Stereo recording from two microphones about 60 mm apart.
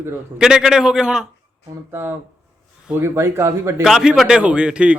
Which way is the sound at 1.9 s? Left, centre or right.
Right.